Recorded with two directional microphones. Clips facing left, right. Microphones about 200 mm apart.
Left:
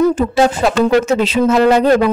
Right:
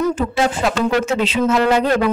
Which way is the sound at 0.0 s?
35° left (ahead or behind).